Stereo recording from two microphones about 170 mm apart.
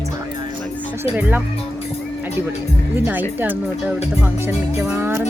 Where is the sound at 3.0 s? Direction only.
10° right (ahead or behind).